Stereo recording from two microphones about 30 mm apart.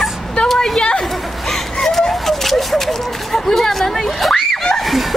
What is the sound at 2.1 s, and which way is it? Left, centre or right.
Speech, centre.